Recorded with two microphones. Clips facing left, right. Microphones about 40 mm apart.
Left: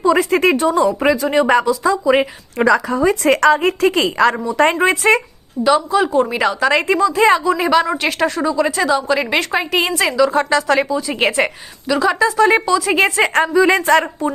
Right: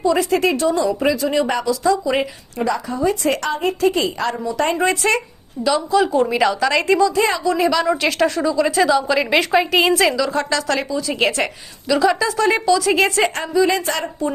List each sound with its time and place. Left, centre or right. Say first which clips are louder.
0.2 s speech: left 3 dB; left
1.5 s a woman's voice: left 6 dB; left
1.8 s a woman's voice: left 3 dB; left
2.6 s a woman's voice: left 6 dB; left
5.6 s a woman's voice: left 2 dB; centre
7.0 s speech: left 4 dB; left
7.5 s a woman's voice: left 3 dB; left
7.9 s a woman's voice: right 1 dB; centre
10.2 s a woman's voice: left 5 dB; centre
11.9 s a woman's voice: left 1 dB; centre
12.5 s a woman's voice: left 1 dB; left
13.2 s a woman's voice: left 4 dB; left